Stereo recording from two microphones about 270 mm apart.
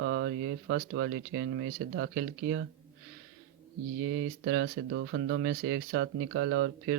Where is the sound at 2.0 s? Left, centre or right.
Right.